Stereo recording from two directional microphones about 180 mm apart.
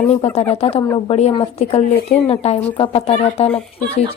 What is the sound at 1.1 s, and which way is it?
Speech, 35° left (ahead or behind).